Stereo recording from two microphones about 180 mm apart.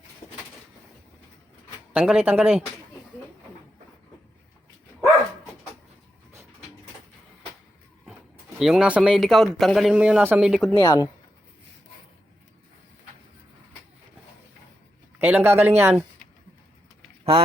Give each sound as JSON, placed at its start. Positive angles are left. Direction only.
{"t": 1.9, "sound": "speech", "side_deg": -5}
{"t": 8.5, "sound": "speech", "side_deg": 0}
{"t": 10.8, "sound": "speech", "side_deg": 20}
{"t": 15.2, "sound": "speech", "side_deg": -10}